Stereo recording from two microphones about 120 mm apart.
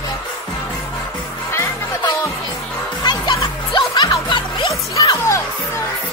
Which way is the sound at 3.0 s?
40° left (ahead or behind).